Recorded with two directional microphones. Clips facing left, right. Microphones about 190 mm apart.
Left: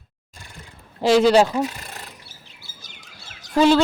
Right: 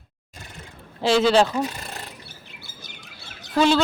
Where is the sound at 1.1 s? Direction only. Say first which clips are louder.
Left 3 dB; 10° left (ahead or behind).